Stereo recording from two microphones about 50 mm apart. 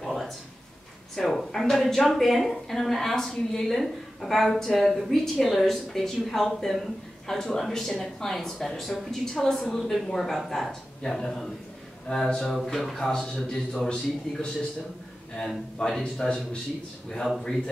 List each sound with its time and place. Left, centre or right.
0.0 s a sound: centre
1.1 s a woman's voice: centre
13.8 s a man's voice: centre
15.3 s a man's voice: centre